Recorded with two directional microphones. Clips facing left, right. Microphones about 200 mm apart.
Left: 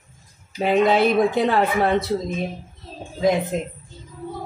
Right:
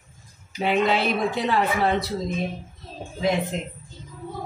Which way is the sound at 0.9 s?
55° left (ahead or behind).